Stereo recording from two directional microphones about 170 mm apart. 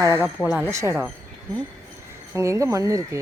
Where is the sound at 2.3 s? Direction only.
15° right (ahead or behind).